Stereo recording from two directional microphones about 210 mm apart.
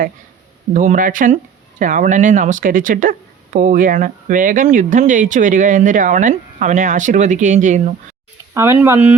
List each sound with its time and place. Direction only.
0.7 s speech: 40° right (ahead or behind)
8.5 s speech: 15° right (ahead or behind)